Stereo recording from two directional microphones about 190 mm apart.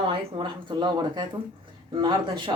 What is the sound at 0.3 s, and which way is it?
Speech, 25° right (ahead or behind).